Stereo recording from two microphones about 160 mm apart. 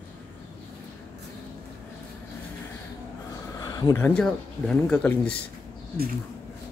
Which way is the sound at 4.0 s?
5° left (ahead or behind).